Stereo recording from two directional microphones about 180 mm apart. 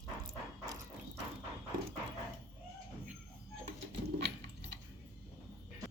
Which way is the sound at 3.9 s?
70° right (ahead or behind).